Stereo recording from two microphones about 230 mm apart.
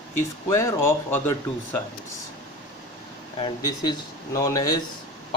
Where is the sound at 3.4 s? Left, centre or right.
Centre.